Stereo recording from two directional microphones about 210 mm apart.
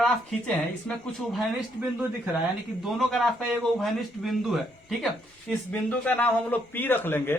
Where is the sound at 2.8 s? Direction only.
Centre (ahead or behind).